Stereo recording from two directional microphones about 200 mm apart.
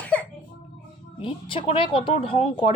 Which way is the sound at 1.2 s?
25° left (ahead or behind).